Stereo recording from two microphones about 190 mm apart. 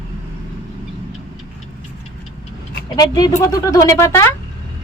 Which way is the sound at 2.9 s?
20° left (ahead or behind).